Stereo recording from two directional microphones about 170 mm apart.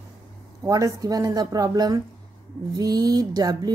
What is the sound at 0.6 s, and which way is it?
Speech, 20° right (ahead or behind).